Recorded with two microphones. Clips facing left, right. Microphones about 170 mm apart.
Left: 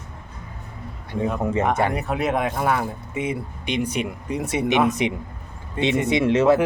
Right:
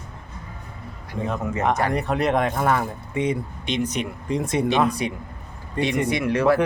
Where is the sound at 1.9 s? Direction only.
5° left (ahead or behind).